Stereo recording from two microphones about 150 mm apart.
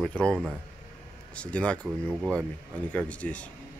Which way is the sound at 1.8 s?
10° right (ahead or behind).